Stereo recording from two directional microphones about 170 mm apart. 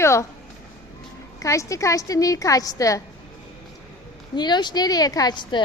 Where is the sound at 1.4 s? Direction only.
20° left (ahead or behind).